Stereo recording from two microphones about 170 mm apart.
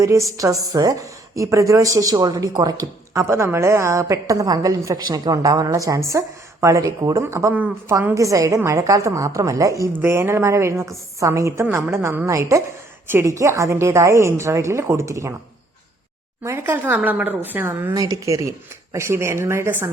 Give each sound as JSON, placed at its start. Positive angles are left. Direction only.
{"t": 0.0, "sound": "a woman's voice", "side_deg": -20}
{"t": 16.4, "sound": "a woman's voice", "side_deg": -15}